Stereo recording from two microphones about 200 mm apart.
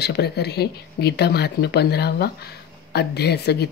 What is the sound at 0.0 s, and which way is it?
Speech, 55° left (ahead or behind).